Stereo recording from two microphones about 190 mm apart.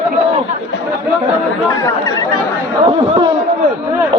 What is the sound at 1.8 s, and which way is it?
Speech, 20° left (ahead or behind).